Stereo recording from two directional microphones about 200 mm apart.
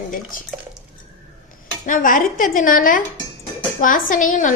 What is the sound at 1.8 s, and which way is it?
A woman's voice, 40° left (ahead or behind).